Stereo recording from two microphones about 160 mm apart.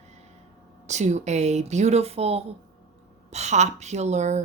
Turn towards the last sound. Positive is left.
turn(degrees=-45)  # may be behind; listen again after turning